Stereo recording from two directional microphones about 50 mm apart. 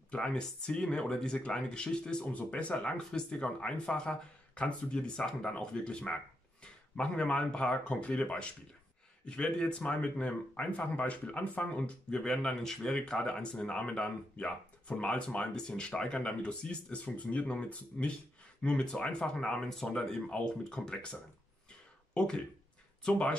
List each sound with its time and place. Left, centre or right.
0.1 s speech: centre
2.2 s speech: left